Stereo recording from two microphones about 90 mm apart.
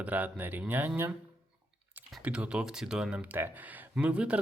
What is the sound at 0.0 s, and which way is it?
Speech, 20° right (ahead or behind).